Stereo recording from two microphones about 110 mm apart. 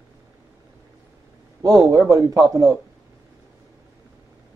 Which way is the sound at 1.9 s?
30° right (ahead or behind).